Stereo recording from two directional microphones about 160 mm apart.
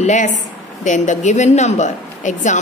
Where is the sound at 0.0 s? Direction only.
50° left (ahead or behind).